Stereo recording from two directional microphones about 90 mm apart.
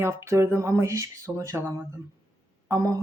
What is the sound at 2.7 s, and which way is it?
Speech, 40° right (ahead or behind).